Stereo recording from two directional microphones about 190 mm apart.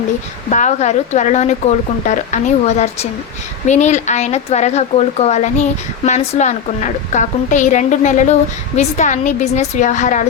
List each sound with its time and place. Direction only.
0.5 s a woman's voice: 40° left (ahead or behind)